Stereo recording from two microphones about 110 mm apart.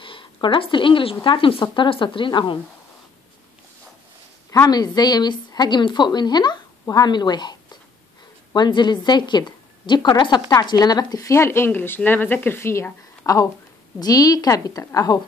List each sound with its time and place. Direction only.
0.0 s a woman's voice: 50° left (ahead or behind)
4.5 s a woman's voice: 35° left (ahead or behind)